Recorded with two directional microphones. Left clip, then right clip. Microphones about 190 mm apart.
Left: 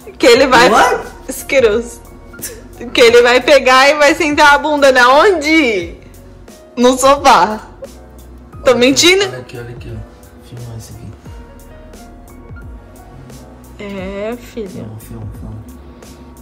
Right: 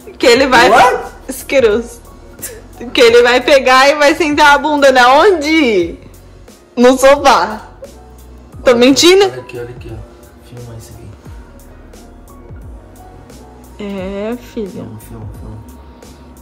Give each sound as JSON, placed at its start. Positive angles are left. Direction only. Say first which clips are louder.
{"t": 0.0, "sound": "a woman's voice", "louder": "left 1 dB", "side_deg": -5}
{"t": 8.6, "sound": "a woman's voice", "louder": "right 2 dB", "side_deg": -20}
{"t": 13.7, "sound": "speech", "louder": "right 1 dB", "side_deg": -15}